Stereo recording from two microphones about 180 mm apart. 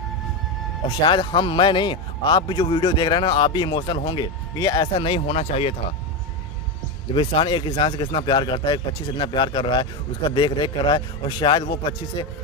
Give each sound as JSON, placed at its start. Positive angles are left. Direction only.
{"t": 1.0, "sound": "a man's voice", "side_deg": 25}
{"t": 7.2, "sound": "a man's voice", "side_deg": 30}